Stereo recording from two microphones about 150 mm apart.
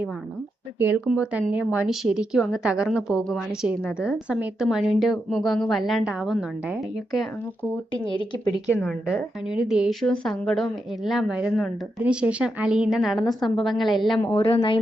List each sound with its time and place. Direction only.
0.8 s a woman's voice: 10° right (ahead or behind)
8.0 s speech: 30° left (ahead or behind)
8.8 s a woman's voice: centre (ahead or behind)
14.3 s speech: 40° left (ahead or behind)